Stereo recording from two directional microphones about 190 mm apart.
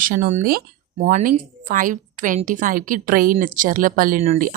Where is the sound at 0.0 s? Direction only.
45° right (ahead or behind).